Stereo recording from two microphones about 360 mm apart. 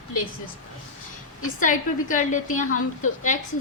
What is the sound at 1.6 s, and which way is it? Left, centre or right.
A woman's voice, left.